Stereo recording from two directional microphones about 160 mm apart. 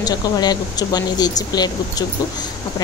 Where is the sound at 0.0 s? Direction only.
25° left (ahead or behind).